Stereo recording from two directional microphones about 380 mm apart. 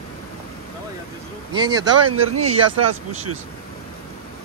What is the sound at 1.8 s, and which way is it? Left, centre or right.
Speech, right.